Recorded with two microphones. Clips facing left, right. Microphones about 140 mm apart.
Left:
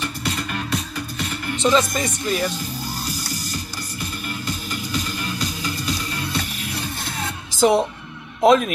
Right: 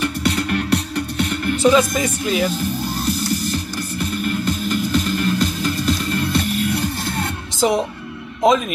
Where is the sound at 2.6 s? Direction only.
55° right (ahead or behind).